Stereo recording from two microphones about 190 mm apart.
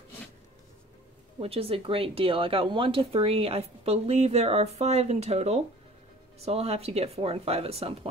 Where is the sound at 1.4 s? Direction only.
30° right (ahead or behind).